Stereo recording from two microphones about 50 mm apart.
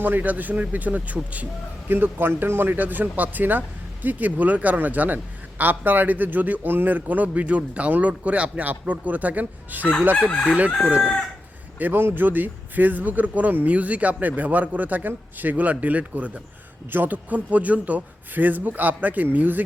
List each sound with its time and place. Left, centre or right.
0.0 s a man's voice: right
1.9 s a man's voice: right
10.2 s chicken: left
11.8 s a man's voice: right